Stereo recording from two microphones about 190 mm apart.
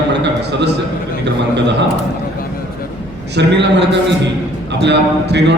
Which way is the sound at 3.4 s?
65° right (ahead or behind).